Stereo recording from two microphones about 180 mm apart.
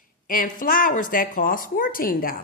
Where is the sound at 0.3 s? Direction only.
50° left (ahead or behind).